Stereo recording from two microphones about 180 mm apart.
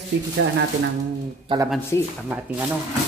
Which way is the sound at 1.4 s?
25° right (ahead or behind).